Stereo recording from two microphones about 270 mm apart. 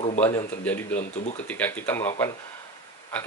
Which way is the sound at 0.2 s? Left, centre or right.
Centre.